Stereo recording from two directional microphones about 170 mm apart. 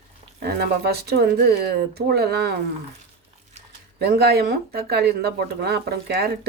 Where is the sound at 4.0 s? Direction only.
70° right (ahead or behind).